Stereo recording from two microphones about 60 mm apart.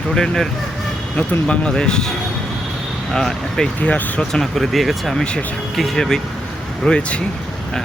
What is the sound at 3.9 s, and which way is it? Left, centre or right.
Speech, left.